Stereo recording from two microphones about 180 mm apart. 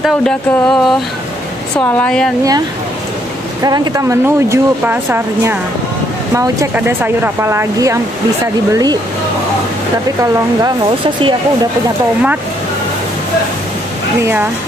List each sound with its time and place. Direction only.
0.0 s a sound: 5° left (ahead or behind)
3.6 s speech: 20° right (ahead or behind)
10.6 s speech: 25° right (ahead or behind)
14.2 s speech: 10° right (ahead or behind)